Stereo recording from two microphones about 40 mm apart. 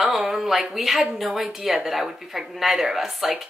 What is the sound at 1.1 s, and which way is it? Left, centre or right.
A woman's voice, centre.